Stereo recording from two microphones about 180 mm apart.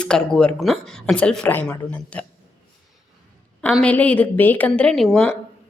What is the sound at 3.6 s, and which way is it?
A woman's voice, 5° left (ahead or behind).